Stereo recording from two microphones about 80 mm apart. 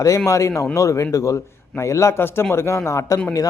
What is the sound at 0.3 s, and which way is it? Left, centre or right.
Speech, left.